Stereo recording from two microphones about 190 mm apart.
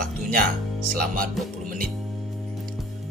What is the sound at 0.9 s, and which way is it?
Speech, 45° right (ahead or behind).